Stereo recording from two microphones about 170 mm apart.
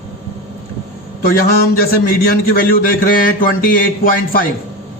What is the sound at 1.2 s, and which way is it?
Speech, 60° left (ahead or behind).